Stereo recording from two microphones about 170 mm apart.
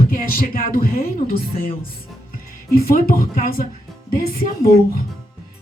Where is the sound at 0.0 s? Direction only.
55° left (ahead or behind).